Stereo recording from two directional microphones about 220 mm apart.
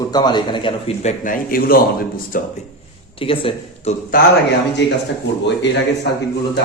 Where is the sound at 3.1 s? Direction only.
25° left (ahead or behind).